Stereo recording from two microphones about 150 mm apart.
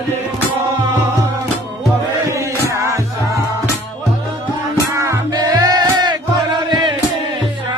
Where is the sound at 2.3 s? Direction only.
20° right (ahead or behind).